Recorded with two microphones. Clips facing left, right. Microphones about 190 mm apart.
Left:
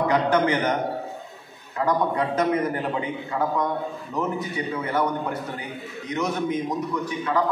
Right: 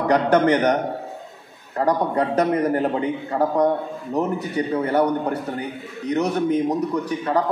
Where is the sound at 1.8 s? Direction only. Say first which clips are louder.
Right 3 dB; 40° right (ahead or behind).